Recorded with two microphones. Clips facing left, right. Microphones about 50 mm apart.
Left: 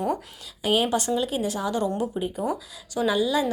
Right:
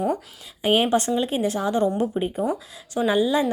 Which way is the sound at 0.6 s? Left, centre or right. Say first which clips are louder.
Right 3 dB; right.